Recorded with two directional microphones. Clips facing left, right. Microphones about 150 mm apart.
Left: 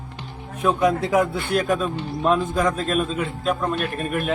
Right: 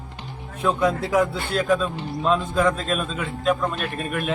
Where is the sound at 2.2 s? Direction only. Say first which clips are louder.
Even; 40° left (ahead or behind).